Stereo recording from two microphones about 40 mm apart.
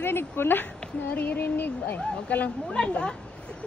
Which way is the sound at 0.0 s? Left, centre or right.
Left.